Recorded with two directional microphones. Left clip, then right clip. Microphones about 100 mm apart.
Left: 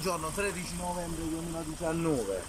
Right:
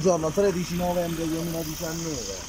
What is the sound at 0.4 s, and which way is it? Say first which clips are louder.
Speech: right 10 dB; 90° right.